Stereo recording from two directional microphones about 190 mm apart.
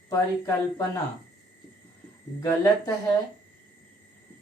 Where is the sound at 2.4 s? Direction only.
15° left (ahead or behind).